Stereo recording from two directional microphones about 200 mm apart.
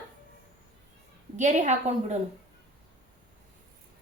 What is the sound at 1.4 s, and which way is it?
Speech, 35° right (ahead or behind).